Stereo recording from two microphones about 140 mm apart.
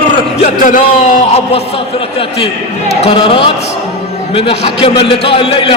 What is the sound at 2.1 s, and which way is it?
A man's voice, 45° left (ahead or behind).